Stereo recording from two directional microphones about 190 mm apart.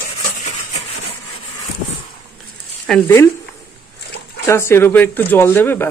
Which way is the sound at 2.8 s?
10° left (ahead or behind).